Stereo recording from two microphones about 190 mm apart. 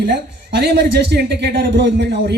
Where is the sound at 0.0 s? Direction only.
65° right (ahead or behind).